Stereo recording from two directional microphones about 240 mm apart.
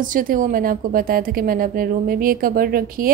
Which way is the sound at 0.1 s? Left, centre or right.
Right.